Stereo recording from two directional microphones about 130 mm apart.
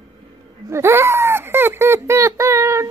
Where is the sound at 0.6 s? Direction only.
20° right (ahead or behind).